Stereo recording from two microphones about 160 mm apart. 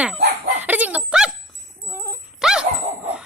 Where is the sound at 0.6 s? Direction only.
10° right (ahead or behind).